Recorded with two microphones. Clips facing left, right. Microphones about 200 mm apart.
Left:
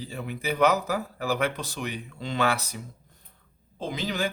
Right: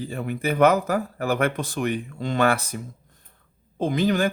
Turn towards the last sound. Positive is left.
turn(degrees=-50)  # may be behind; listen again after turning